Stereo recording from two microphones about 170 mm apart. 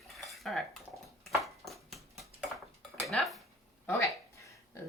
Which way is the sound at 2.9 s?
Centre (ahead or behind).